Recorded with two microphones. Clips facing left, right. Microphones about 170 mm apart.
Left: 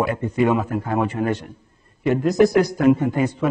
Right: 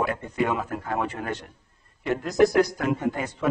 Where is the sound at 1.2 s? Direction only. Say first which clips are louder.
Left 9 dB; 25° left (ahead or behind).